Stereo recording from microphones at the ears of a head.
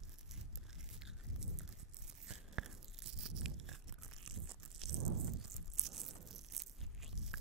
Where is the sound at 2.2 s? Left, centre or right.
Right.